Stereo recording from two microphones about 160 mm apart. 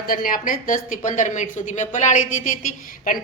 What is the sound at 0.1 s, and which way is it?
A woman's voice, 60° left (ahead or behind).